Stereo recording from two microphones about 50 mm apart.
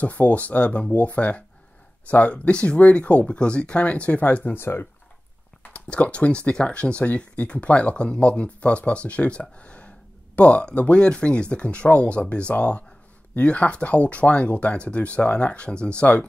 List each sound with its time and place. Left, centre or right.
0.0 s speech: left
4.6 s speech: left
5.6 s speech: left